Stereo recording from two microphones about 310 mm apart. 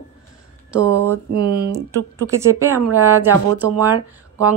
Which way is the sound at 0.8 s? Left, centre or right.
Right.